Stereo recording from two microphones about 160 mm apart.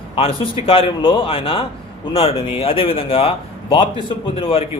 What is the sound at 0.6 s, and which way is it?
A man's voice, 35° left (ahead or behind).